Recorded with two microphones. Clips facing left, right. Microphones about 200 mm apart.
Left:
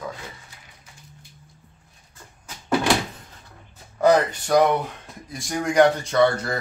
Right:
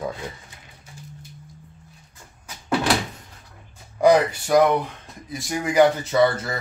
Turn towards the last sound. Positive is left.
turn(degrees=0)  # may be behind; listen again after turning